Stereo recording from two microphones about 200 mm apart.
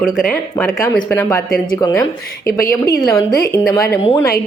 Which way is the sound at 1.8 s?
20° left (ahead or behind).